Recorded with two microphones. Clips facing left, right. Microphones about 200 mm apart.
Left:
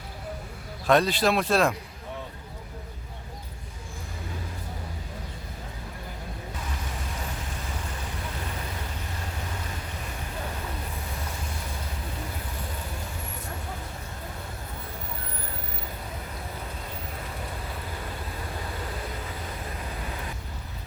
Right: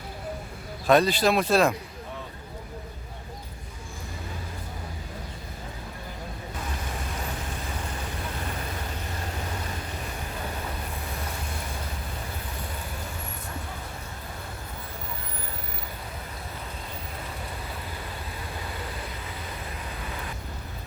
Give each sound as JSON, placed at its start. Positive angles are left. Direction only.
{"t": 0.9, "sound": "speech", "side_deg": 0}